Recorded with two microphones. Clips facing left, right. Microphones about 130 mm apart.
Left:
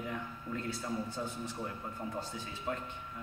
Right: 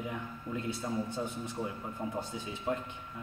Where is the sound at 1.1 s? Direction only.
20° right (ahead or behind).